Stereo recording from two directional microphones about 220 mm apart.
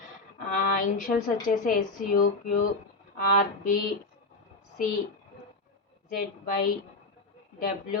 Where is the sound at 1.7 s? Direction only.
40° left (ahead or behind).